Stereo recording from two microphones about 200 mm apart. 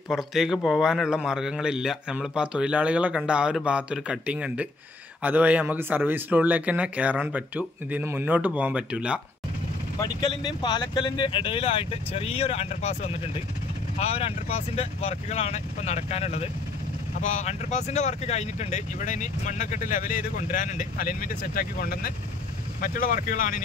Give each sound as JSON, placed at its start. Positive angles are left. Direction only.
{"t": 0.1, "sound": "a man's voice", "side_deg": 0}
{"t": 9.9, "sound": "speech", "side_deg": 25}